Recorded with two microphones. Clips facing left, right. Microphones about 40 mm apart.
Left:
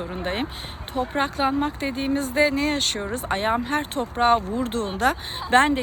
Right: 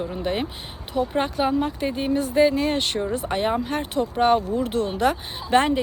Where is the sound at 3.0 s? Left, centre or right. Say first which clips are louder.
Right 4 dB; centre.